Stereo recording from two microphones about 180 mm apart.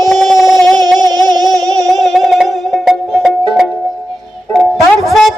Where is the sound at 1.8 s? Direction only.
Centre (ahead or behind).